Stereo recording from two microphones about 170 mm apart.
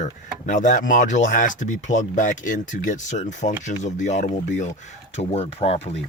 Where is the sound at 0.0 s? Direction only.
45° left (ahead or behind).